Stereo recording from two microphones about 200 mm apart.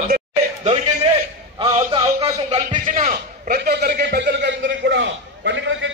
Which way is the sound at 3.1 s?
45° right (ahead or behind).